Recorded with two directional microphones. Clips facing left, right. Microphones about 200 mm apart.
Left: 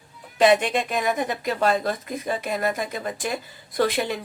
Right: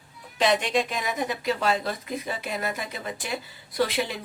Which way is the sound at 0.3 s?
55° left (ahead or behind).